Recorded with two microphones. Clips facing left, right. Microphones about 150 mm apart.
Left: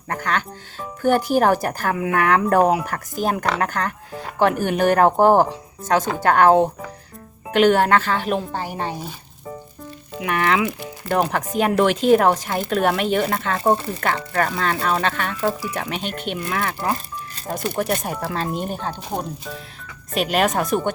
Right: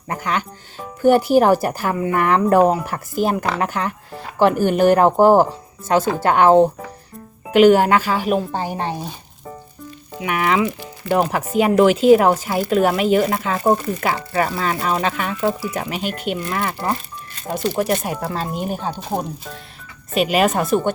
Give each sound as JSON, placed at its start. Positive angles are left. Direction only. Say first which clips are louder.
{"t": 0.1, "sound": "speech", "louder": "right 1 dB", "side_deg": -10}
{"t": 8.5, "sound": "speech", "louder": "right 3 dB", "side_deg": -20}
{"t": 10.2, "sound": "speech", "louder": "right 1 dB", "side_deg": -5}